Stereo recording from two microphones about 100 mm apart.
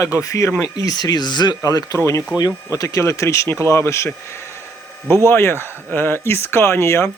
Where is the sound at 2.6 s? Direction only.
35° left (ahead or behind).